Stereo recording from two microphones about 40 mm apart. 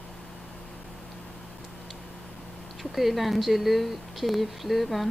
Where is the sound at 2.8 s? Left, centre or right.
Centre.